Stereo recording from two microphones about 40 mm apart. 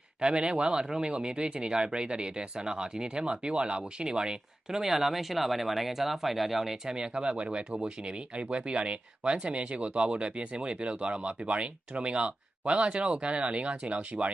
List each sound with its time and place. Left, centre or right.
0.2 s speech: right
4.8 s speech: centre
6.8 s speech: right